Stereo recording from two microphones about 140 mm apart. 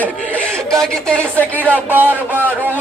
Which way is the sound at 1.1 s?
10° left (ahead or behind).